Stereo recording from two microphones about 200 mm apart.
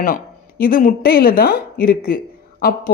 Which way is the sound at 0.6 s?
45° left (ahead or behind).